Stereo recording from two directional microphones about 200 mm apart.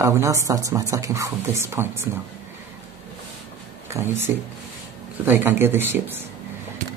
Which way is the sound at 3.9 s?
10° right (ahead or behind).